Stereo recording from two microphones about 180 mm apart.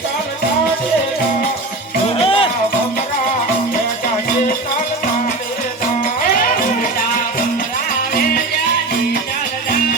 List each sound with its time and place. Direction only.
2.1 s music: 30° left (ahead or behind)
6.3 s music: 50° left (ahead or behind)